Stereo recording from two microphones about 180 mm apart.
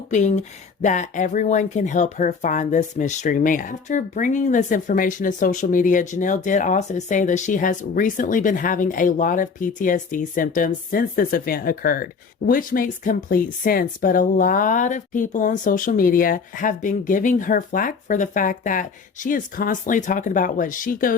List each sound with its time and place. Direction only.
0.1 s speech: 40° left (ahead or behind)